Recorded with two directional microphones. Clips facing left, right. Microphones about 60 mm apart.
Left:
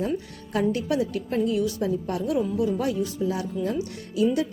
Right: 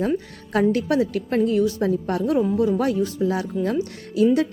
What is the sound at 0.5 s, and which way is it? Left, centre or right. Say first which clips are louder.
A woman's voice: right 5 dB; right.